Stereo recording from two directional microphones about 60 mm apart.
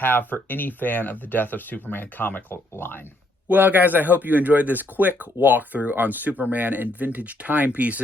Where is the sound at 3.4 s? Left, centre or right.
Right.